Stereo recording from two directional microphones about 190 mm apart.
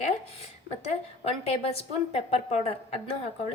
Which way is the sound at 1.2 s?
30° left (ahead or behind).